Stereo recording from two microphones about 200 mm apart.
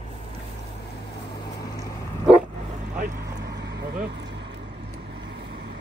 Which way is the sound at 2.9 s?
50° right (ahead or behind).